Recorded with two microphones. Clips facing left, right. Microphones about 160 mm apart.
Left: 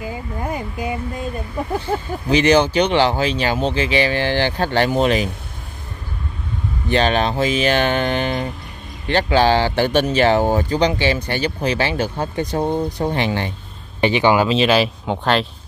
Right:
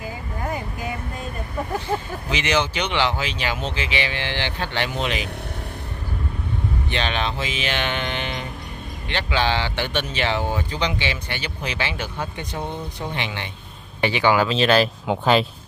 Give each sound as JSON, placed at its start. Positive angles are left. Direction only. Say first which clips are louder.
{"t": 0.0, "sound": "a sound", "louder": "left 4 dB", "side_deg": 20}
{"t": 2.2, "sound": "speech", "louder": "left 10 dB", "side_deg": 40}
{"t": 6.9, "sound": "speech", "louder": "left 10 dB", "side_deg": 40}
{"t": 14.0, "sound": "speech", "louder": "left 4 dB", "side_deg": 20}
{"t": 14.6, "sound": "speech", "louder": "left 2 dB", "side_deg": 5}
{"t": 15.0, "sound": "speech", "louder": "even", "side_deg": -5}